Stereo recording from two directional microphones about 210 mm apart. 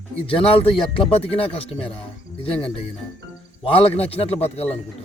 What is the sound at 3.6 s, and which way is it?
Speech, 25° left (ahead or behind).